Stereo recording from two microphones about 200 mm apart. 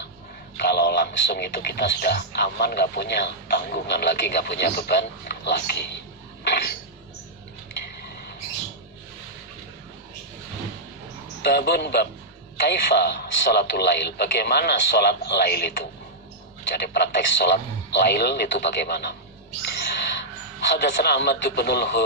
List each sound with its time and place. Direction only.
0.6 s speech: 55° left (ahead or behind)
6.5 s a sound: 55° left (ahead or behind)
11.4 s speech: 55° left (ahead or behind)
19.7 s owl: 60° left (ahead or behind)
20.7 s speech: 60° left (ahead or behind)